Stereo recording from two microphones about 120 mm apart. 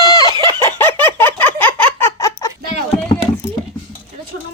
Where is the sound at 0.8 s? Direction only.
20° left (ahead or behind).